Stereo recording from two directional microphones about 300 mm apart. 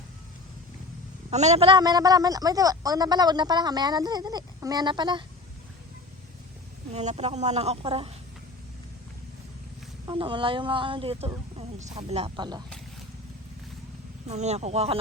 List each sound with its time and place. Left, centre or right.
1.3 s a woman's voice: right
6.9 s speech: right
10.1 s a woman's voice: centre
14.3 s speech: right